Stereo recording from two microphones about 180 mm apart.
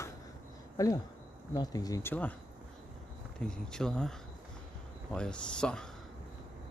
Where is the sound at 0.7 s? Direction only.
20° left (ahead or behind).